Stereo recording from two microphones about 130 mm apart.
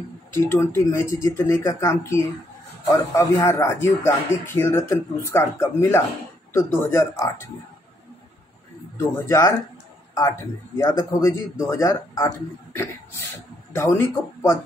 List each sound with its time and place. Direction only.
0.3 s speech: 20° left (ahead or behind)
8.9 s speech: 20° left (ahead or behind)
10.8 s speech: 25° left (ahead or behind)